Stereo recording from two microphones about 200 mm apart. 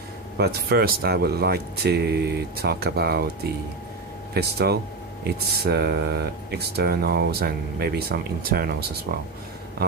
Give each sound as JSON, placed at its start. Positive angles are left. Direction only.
{"t": 0.4, "sound": "speech", "side_deg": -50}
{"t": 4.3, "sound": "speech", "side_deg": -55}